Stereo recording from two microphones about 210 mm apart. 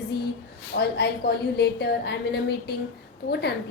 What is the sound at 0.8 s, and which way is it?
A woman's voice, 50° left (ahead or behind).